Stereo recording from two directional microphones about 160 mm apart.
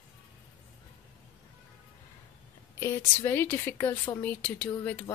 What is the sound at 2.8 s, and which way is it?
Speech, 15° left (ahead or behind).